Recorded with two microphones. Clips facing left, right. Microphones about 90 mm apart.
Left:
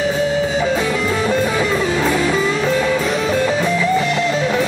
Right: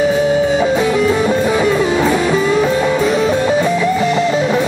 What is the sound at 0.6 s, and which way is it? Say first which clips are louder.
Music: right 4 dB; 5° right (ahead or behind).